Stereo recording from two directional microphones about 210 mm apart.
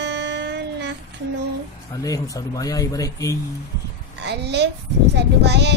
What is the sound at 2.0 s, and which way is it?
Speech, 15° left (ahead or behind).